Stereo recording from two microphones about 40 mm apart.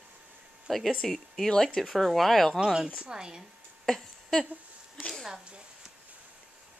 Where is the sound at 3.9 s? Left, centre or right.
Centre.